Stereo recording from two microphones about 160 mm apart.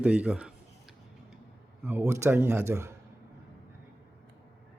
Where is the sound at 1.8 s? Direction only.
15° right (ahead or behind).